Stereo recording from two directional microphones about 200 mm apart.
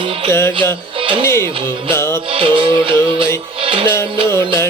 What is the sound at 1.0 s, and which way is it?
Speech, 25° right (ahead or behind).